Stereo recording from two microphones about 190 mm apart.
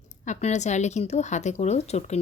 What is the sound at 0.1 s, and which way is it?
Speech, 40° left (ahead or behind).